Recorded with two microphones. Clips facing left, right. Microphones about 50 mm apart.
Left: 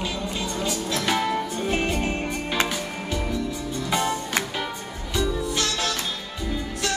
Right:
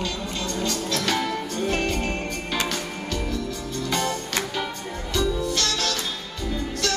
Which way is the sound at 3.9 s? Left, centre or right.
Centre.